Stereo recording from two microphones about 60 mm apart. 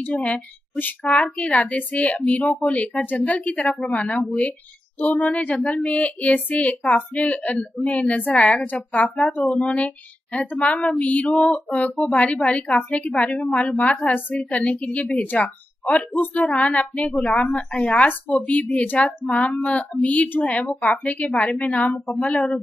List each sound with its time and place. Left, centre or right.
0.1 s a woman's voice: left
5.6 s speech: centre
5.9 s a woman's voice: left
11.2 s female singing: centre
11.5 s a woman's voice: left